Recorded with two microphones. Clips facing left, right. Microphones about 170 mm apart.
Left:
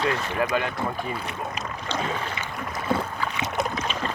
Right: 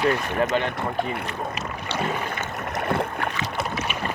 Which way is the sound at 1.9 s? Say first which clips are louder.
Right 2 dB; 10° right (ahead or behind).